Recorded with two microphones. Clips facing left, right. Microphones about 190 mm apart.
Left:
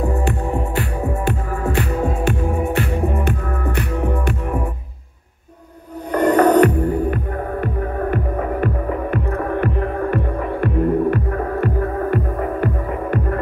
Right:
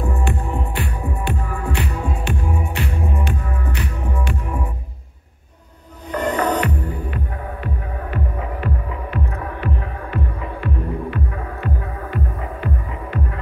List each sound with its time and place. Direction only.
0.7 s music: 45° left (ahead or behind)
6.1 s music: 50° left (ahead or behind)